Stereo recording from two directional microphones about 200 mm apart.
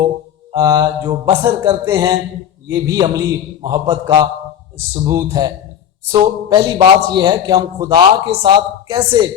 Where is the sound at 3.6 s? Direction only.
20° right (ahead or behind).